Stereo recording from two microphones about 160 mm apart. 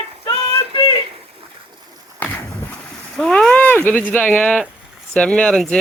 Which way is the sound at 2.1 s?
10° left (ahead or behind).